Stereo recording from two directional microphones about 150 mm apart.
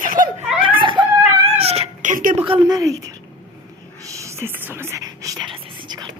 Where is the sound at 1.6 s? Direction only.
45° right (ahead or behind); by 2.4 s 60° right (ahead or behind).